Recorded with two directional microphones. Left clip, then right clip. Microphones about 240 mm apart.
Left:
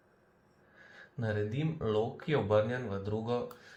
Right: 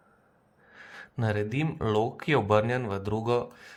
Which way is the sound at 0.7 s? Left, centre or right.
Right.